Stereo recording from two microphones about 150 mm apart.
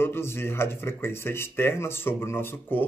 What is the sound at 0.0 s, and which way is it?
Speech, 15° left (ahead or behind).